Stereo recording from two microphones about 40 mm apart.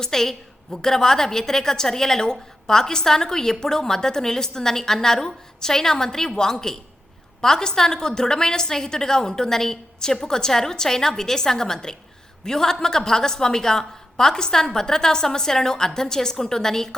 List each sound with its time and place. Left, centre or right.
0.0 s a woman's voice: centre